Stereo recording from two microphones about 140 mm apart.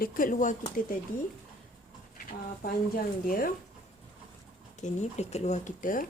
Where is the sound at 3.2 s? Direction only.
80° left.